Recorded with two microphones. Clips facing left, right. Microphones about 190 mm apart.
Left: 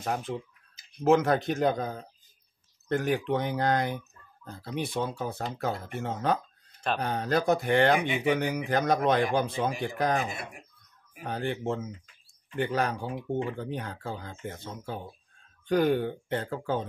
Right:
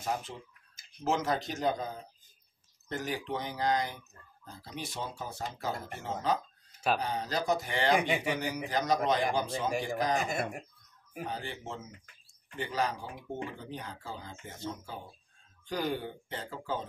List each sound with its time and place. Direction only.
0.0 s speech: 55° left (ahead or behind)
10.2 s speech: 45° right (ahead or behind)
11.2 s speech: 55° left (ahead or behind)